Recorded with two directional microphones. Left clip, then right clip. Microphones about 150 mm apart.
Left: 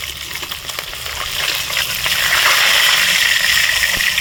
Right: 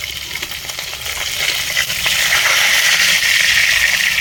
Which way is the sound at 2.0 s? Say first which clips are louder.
Left 1 dB; 25° left (ahead or behind).